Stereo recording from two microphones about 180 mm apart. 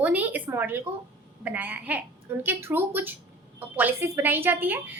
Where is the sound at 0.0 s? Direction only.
10° right (ahead or behind).